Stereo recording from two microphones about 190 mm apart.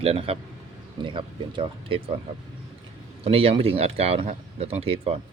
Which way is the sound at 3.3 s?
30° right (ahead or behind).